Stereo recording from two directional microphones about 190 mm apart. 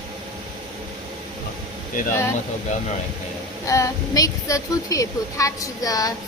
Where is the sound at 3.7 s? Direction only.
15° left (ahead or behind).